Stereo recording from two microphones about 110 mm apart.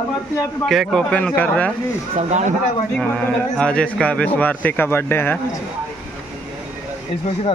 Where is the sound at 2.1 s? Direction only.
90° right.